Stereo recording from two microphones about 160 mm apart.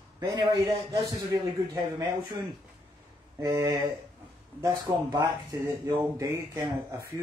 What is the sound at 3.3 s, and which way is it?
Speech, 20° right (ahead or behind).